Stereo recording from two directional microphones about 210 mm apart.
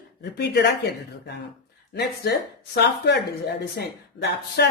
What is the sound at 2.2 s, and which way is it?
Speech, 50° left (ahead or behind).